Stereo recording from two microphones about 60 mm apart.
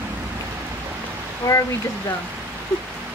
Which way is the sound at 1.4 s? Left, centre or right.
Left.